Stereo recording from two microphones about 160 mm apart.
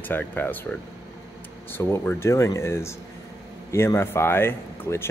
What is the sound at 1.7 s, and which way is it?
Speech, 15° left (ahead or behind).